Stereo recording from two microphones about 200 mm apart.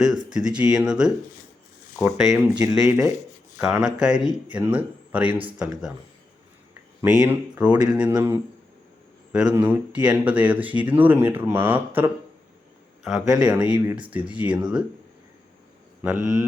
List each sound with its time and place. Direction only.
0.3 s speech: 5° right (ahead or behind)
7.0 s speech: 5° right (ahead or behind)
9.5 s speech: 10° right (ahead or behind)
13.7 s speech: 20° right (ahead or behind)
14.1 s speech: 5° right (ahead or behind)
16.0 s speech: 5° right (ahead or behind)